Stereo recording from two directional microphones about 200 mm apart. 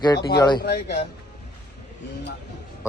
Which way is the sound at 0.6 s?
55° left (ahead or behind).